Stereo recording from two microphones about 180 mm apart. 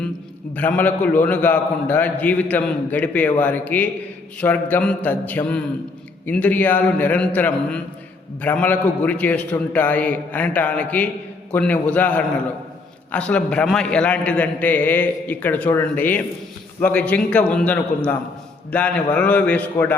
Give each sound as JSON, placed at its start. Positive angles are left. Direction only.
{"t": 0.5, "sound": "a man's voice", "side_deg": 10}